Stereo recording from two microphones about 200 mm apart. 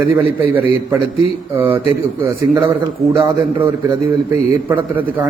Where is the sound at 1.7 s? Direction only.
15° right (ahead or behind).